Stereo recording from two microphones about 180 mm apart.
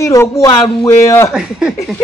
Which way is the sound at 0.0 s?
15° left (ahead or behind).